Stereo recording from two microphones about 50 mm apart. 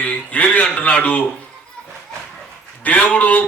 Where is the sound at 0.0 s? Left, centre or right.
Left.